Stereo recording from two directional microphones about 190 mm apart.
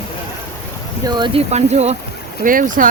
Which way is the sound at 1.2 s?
30° right (ahead or behind).